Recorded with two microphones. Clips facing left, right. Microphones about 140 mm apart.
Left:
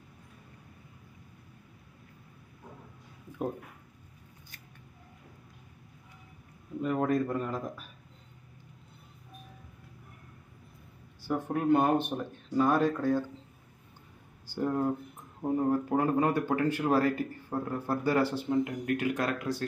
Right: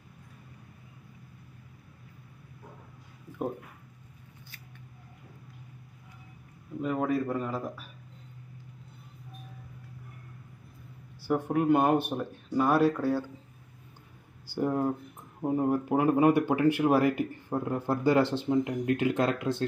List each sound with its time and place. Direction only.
6.8 s speech: 5° right (ahead or behind)
11.2 s speech: 10° right (ahead or behind)
14.5 s speech: 10° right (ahead or behind)